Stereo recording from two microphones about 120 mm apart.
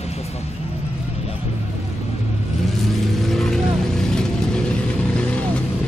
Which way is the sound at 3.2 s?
Centre (ahead or behind).